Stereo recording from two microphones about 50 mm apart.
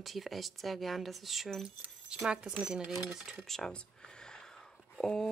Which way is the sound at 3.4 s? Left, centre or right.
Centre.